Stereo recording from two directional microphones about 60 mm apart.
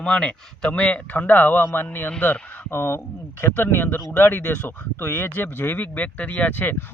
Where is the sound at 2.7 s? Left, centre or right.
Left.